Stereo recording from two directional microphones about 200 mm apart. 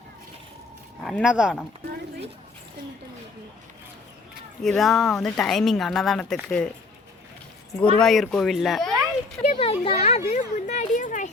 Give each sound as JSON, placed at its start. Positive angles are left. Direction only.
{"t": 1.0, "sound": "speech", "side_deg": 0}
{"t": 4.6, "sound": "speech", "side_deg": 0}
{"t": 7.9, "sound": "speech", "side_deg": 0}
{"t": 9.6, "sound": "speech", "side_deg": 25}
{"t": 10.0, "sound": "a sound", "side_deg": 30}